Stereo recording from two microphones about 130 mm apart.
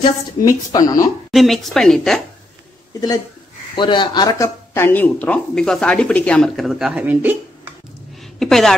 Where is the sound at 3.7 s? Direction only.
35° left (ahead or behind).